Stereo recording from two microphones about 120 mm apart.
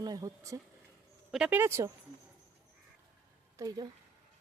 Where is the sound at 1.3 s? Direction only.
5° right (ahead or behind).